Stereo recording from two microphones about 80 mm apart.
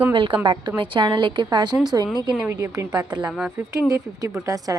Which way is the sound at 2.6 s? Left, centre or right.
Right.